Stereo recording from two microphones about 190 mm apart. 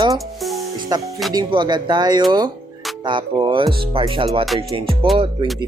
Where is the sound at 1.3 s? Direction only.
20° right (ahead or behind).